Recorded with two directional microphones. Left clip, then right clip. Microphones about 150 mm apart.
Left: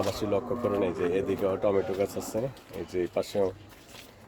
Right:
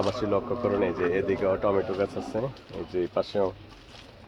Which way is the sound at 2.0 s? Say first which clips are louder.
Right 1 dB; 25° left (ahead or behind).